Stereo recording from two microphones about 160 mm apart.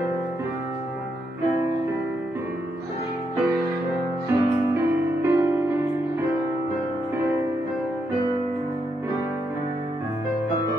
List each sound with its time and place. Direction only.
4.3 s music: 15° right (ahead or behind)